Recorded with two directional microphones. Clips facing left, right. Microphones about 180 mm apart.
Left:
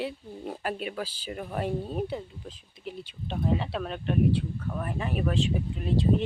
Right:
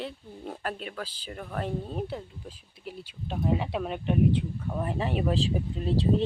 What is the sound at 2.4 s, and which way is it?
Speech, 10° right (ahead or behind).